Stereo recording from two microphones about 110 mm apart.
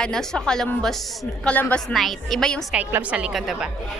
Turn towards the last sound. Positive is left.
turn(degrees=-5)  # may be behind; listen again after turning